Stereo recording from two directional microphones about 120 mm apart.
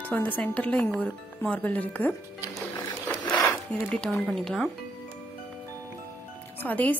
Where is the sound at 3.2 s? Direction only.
40° left (ahead or behind).